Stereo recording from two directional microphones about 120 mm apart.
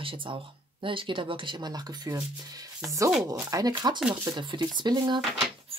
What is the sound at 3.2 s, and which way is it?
Speech, 20° right (ahead or behind).